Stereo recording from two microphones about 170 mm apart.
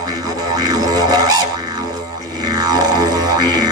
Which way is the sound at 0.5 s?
25° right (ahead or behind).